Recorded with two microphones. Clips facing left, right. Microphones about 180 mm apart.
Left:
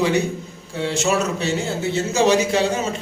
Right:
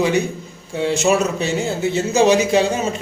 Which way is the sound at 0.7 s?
15° right (ahead or behind).